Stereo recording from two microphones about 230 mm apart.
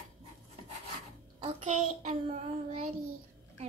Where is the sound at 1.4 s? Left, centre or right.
Right.